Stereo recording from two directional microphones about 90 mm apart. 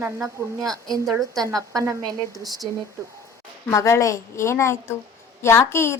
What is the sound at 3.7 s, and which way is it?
A woman's voice, 35° left (ahead or behind).